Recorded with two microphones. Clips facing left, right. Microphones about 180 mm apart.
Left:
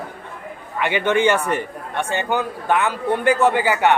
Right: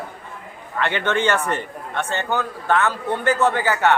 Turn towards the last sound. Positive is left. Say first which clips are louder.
# left 2 dB
turn(degrees=15)  # may be behind; listen again after turning